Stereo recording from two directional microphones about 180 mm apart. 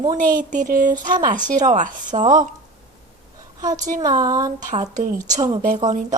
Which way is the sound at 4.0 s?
20° right (ahead or behind).